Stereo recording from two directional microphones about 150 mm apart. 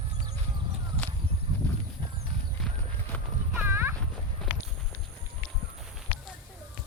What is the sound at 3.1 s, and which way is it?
Clip-clop, 10° left (ahead or behind).